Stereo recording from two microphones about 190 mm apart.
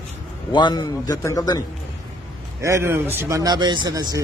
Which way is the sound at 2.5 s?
15° right (ahead or behind).